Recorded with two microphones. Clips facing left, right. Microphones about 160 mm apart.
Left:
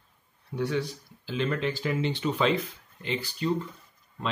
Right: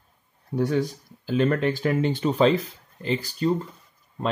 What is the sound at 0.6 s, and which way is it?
Speech, 45° right (ahead or behind).